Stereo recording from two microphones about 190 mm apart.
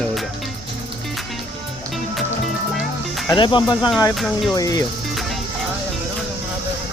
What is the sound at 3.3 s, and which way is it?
Speech, 25° left (ahead or behind).